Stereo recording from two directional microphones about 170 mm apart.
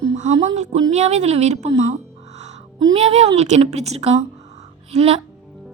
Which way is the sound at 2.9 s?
35° right (ahead or behind).